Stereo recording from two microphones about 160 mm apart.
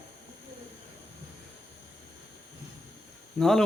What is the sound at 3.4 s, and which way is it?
Speech, 5° left (ahead or behind).